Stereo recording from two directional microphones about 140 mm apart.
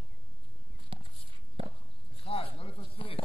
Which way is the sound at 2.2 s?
45° left (ahead or behind).